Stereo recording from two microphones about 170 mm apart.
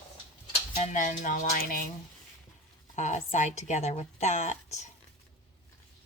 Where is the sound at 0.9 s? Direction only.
50° left (ahead or behind).